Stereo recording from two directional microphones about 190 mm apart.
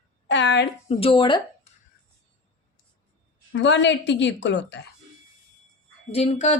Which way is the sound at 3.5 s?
70° left (ahead or behind).